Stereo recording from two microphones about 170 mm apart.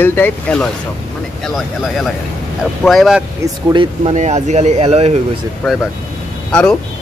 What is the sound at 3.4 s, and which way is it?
Speech, 30° right (ahead or behind).